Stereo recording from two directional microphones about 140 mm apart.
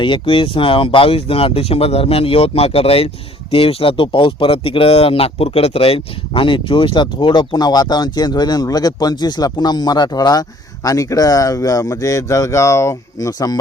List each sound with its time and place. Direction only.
0.0 s speech: 35° left (ahead or behind)